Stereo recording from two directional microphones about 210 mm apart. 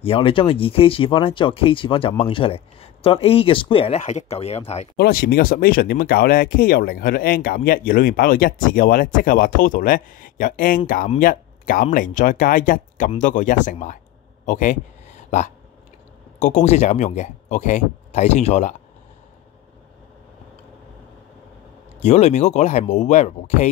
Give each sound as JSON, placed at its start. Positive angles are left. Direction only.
{"t": 0.0, "sound": "speech", "side_deg": 25}
{"t": 4.9, "sound": "speech", "side_deg": 45}
{"t": 14.4, "sound": "a sound", "side_deg": 40}
{"t": 16.3, "sound": "speech", "side_deg": 35}
{"t": 22.0, "sound": "speech", "side_deg": 35}